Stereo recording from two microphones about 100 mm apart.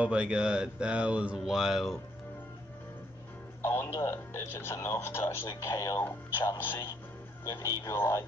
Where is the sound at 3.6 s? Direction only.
25° left (ahead or behind).